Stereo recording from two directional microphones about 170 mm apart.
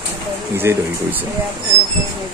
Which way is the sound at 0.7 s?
15° right (ahead or behind).